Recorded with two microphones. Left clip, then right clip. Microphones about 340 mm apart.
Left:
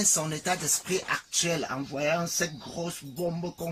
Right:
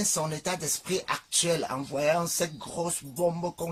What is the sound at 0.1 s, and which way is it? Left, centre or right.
Speech, centre.